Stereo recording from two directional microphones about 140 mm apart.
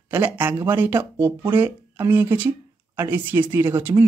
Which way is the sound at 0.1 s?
15° right (ahead or behind).